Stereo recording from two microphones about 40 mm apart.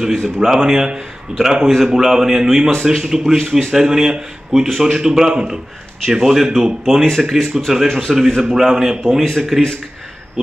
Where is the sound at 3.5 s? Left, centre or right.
Centre.